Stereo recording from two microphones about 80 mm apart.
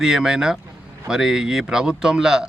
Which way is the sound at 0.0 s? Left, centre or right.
Centre.